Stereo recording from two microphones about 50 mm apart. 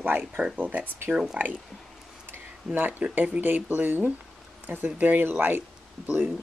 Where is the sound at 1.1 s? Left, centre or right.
Centre.